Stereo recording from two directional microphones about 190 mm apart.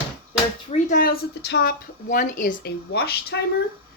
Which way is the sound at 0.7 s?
45° left (ahead or behind).